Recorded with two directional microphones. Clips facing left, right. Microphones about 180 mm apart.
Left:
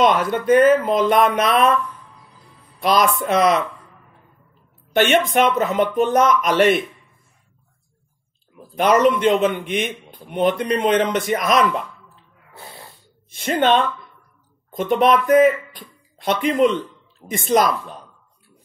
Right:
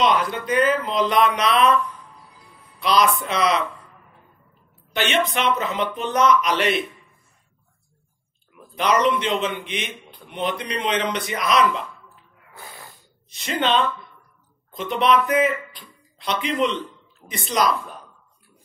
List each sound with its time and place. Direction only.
0.0 s speech: 50° left (ahead or behind)
2.8 s speech: 50° left (ahead or behind)
4.9 s speech: 50° left (ahead or behind)
8.7 s speech: 50° left (ahead or behind)
12.5 s snort: 25° left (ahead or behind)
13.3 s speech: 50° left (ahead or behind)